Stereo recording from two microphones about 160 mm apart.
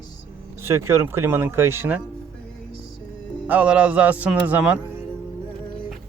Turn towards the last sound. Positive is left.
turn(degrees=-10)  # may be behind; listen again after turning